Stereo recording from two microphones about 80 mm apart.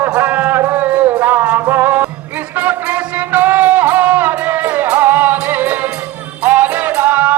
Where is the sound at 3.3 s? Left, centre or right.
Right.